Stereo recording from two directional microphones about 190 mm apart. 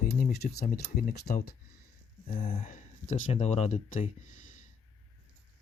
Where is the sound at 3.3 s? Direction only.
35° left (ahead or behind).